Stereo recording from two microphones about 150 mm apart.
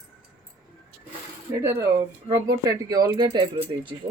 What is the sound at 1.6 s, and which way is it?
Speech, 20° right (ahead or behind).